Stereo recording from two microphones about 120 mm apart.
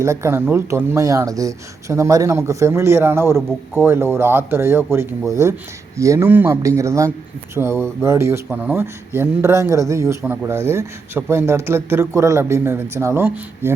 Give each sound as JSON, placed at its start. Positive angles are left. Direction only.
{"t": 0.0, "sound": "speech", "side_deg": -25}